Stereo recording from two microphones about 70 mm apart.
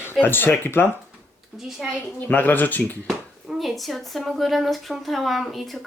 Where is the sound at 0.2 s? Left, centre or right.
Left.